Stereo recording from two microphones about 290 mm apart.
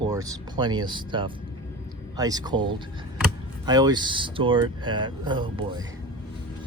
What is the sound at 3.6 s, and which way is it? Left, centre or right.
Speech, centre.